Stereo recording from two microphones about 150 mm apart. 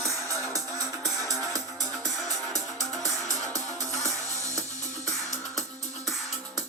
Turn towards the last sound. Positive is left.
turn(degrees=-20)  # may be behind; listen again after turning